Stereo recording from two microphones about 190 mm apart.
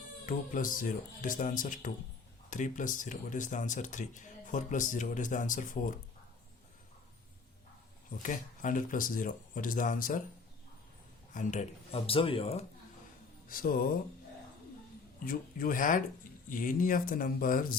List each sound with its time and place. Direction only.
0.3 s speech: 45° left (ahead or behind)
8.2 s speech: 45° left (ahead or behind)
11.3 s speech: 35° left (ahead or behind)
13.5 s speech: 50° left (ahead or behind)
15.2 s speech: 50° left (ahead or behind)